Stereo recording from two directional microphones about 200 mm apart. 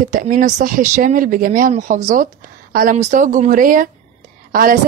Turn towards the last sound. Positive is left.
turn(degrees=-45)  # may be behind; listen again after turning